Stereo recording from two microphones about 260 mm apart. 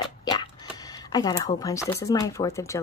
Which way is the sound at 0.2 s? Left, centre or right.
Centre.